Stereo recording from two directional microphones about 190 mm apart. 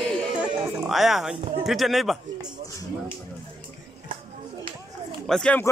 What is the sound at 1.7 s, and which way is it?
Speech, centre (ahead or behind).